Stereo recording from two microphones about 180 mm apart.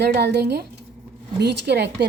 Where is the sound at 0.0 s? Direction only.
65° right (ahead or behind).